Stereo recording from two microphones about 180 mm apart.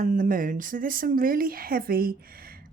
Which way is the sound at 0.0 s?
50° right (ahead or behind).